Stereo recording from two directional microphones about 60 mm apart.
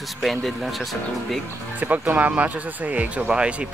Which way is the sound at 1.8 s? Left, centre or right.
Right.